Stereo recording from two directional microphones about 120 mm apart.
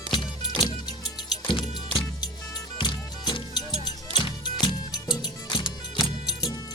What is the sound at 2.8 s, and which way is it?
Music, 40° left (ahead or behind).